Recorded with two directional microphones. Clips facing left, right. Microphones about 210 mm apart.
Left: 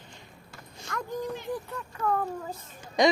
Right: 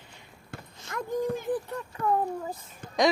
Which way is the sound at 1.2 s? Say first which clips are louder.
Right 5 dB; 50° right (ahead or behind).